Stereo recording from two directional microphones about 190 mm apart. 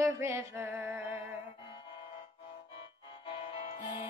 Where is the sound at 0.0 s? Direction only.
15° right (ahead or behind).